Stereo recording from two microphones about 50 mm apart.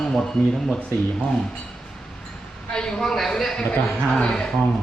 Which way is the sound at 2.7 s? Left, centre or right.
Centre.